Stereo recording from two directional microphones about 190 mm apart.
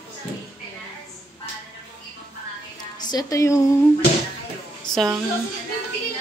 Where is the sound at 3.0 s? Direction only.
20° left (ahead or behind).